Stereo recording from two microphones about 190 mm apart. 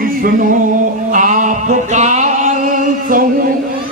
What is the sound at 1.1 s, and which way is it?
Music, 40° right (ahead or behind).